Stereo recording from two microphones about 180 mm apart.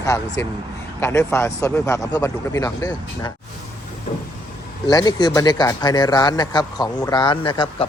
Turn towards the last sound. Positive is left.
turn(degrees=25)  # may be behind; listen again after turning